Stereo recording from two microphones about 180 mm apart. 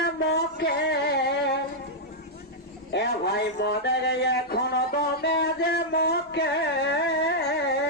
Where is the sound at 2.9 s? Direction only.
65° left (ahead or behind).